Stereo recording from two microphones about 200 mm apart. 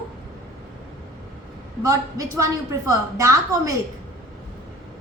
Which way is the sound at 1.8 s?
15° right (ahead or behind).